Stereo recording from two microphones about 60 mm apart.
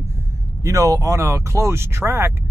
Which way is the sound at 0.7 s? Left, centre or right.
Right.